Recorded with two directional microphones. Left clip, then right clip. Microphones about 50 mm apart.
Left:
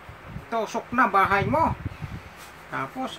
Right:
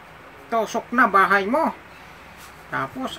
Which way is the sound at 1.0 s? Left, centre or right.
Right.